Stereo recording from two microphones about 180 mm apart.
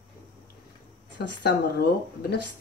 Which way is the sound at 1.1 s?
65° left (ahead or behind).